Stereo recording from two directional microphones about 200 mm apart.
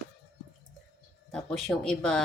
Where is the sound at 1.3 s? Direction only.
Centre (ahead or behind).